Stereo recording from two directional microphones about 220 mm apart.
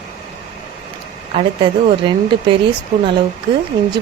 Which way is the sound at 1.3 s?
30° right (ahead or behind).